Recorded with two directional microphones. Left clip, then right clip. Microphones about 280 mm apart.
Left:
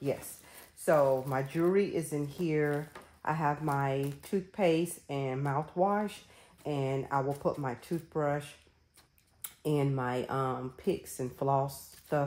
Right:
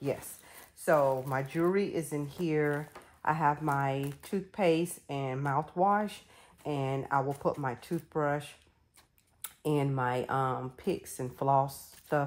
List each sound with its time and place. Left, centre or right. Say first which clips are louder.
0.8 s speech: even; centre
9.8 s speech: right 2 dB; centre